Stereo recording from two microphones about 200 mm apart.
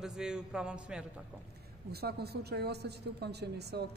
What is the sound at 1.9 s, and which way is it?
Speech, 55° right (ahead or behind).